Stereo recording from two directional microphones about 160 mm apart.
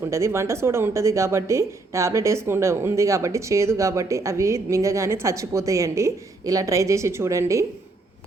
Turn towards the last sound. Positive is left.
turn(degrees=-20)  # may be behind; listen again after turning